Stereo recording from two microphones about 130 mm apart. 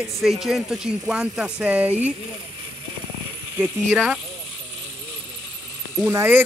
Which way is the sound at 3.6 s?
15° right (ahead or behind).